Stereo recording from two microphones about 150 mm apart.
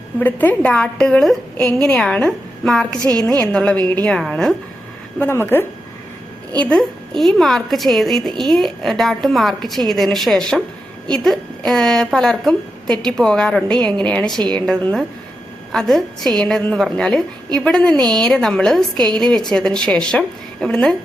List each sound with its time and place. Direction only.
0.2 s a woman's voice: 10° left (ahead or behind)
3.0 s a woman's voice: 25° right (ahead or behind)
3.2 s a woman's voice: 5° left (ahead or behind)
5.2 s a woman's voice: 15° left (ahead or behind)
18.9 s a woman's voice: 30° right (ahead or behind)
19.5 s a woman's voice: 5° left (ahead or behind)